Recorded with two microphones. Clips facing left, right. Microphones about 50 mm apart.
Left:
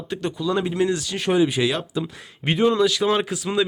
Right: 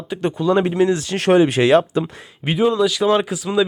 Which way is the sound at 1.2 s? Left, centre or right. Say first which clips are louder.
Right 6 dB; right.